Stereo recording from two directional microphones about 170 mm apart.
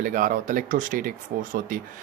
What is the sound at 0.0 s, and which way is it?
Speech, 50° right (ahead or behind).